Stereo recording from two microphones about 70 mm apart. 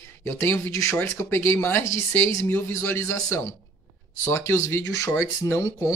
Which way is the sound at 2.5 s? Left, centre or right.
Left.